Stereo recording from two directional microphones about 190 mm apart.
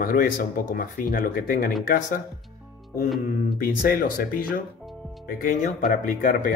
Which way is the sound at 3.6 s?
50° left (ahead or behind).